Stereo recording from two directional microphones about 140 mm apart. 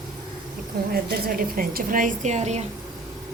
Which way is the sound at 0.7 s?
90° right.